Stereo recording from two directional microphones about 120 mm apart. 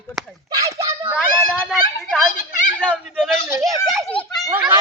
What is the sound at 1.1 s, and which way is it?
Speech, 15° left (ahead or behind).